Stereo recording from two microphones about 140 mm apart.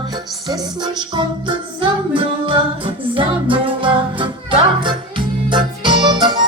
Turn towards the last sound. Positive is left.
turn(degrees=-30)  # may be behind; listen again after turning